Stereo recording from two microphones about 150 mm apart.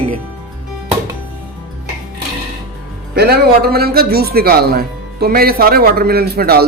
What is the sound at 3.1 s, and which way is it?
A man's voice, 90° right.